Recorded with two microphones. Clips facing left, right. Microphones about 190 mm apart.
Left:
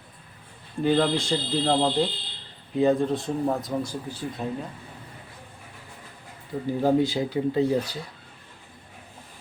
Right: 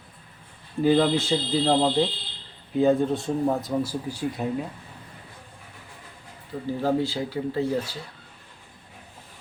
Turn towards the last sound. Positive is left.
turn(degrees=20)  # may be behind; listen again after turning